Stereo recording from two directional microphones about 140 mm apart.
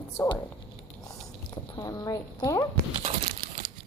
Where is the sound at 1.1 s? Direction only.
30° left (ahead or behind).